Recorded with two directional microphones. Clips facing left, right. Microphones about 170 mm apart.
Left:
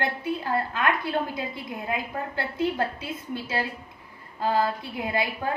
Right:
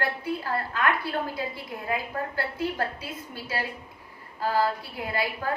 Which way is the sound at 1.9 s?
25° left (ahead or behind).